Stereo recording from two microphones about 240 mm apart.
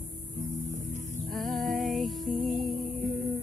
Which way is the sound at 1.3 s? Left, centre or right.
Centre.